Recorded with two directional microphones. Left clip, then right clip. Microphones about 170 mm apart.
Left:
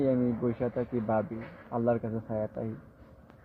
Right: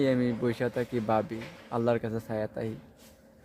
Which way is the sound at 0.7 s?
45° right (ahead or behind).